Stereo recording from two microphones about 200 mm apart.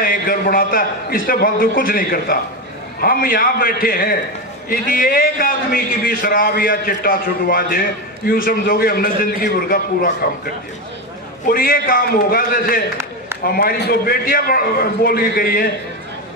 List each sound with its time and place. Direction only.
0.0 s a man's voice: 45° left (ahead or behind)